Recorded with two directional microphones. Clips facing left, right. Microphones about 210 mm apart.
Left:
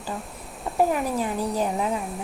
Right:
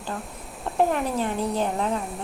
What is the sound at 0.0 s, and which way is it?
A woman's voice, centre (ahead or behind).